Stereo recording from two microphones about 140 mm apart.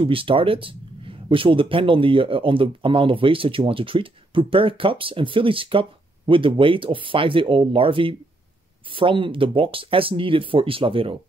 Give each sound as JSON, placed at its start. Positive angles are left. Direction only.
{"t": 0.0, "sound": "speech", "side_deg": -40}